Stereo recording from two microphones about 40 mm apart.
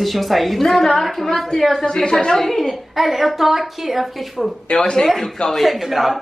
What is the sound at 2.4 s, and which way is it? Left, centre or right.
Speech, centre.